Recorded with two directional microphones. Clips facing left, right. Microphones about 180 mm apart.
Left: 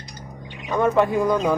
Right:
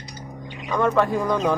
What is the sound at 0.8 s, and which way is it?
Speech, 15° left (ahead or behind).